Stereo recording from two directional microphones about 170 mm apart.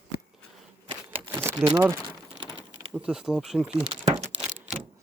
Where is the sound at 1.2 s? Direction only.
10° right (ahead or behind).